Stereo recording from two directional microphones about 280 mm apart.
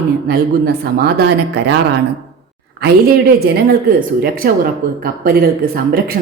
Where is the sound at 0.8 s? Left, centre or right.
Right.